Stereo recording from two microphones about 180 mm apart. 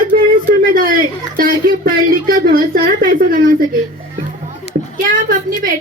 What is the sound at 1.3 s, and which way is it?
A woman's voice, 50° right (ahead or behind).